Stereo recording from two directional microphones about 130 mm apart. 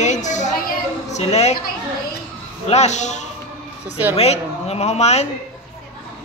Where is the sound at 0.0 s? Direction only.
65° left (ahead or behind).